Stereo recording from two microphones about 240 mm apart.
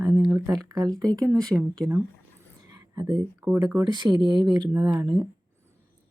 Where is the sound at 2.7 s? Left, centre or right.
Centre.